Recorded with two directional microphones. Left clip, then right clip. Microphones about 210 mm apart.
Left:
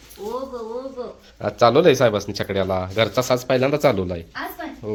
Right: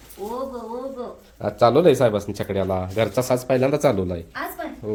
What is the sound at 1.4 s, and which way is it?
Speech, 5° right (ahead or behind).